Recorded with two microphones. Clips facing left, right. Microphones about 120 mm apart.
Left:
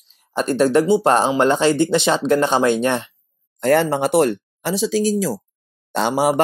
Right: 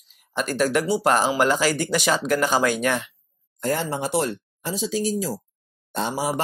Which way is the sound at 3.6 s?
70° left (ahead or behind).